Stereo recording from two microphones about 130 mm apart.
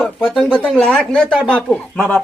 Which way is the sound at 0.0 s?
5° left (ahead or behind).